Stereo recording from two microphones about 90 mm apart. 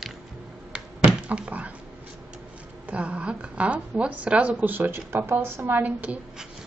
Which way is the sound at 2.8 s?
15° right (ahead or behind).